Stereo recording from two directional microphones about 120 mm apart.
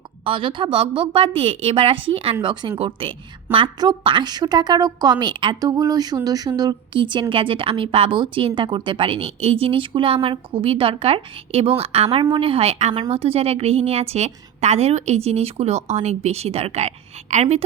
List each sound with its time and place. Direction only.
0.3 s a woman's voice: 45° right (ahead or behind); by 16.9 s 60° right (ahead or behind)